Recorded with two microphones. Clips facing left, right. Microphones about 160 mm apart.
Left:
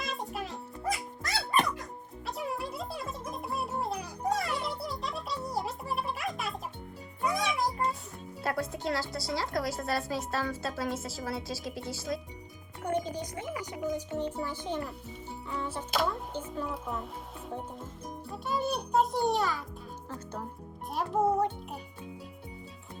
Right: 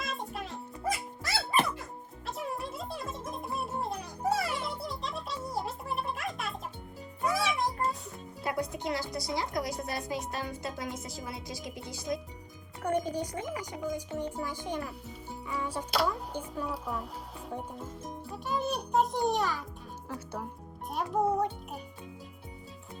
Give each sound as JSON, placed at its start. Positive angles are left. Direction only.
{"t": 0.0, "sound": "music", "side_deg": 0}
{"t": 8.4, "sound": "speech", "side_deg": -20}
{"t": 13.9, "sound": "speech", "side_deg": -10}
{"t": 15.4, "sound": "music", "side_deg": -10}
{"t": 15.9, "sound": "music", "side_deg": 0}
{"t": 16.3, "sound": "a child's voice", "side_deg": -10}
{"t": 20.1, "sound": "music", "side_deg": -10}
{"t": 20.9, "sound": "a child's voice", "side_deg": 0}